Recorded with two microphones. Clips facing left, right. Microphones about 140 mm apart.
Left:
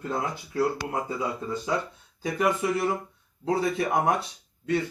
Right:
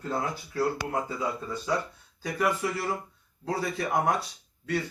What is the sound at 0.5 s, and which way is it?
Speech, 25° left (ahead or behind).